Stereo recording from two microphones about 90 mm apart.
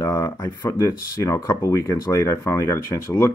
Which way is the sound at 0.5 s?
45° left (ahead or behind).